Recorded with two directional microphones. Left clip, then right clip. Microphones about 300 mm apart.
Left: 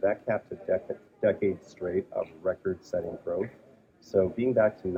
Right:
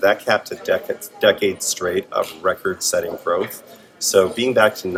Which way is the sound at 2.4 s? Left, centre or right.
Centre.